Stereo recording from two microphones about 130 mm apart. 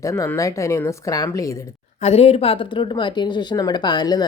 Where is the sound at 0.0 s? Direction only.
25° left (ahead or behind).